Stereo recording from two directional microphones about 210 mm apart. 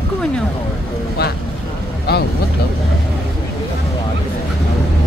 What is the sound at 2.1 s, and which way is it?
Speech, 50° left (ahead or behind).